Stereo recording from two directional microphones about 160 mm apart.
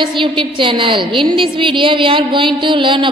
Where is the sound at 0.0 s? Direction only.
30° right (ahead or behind).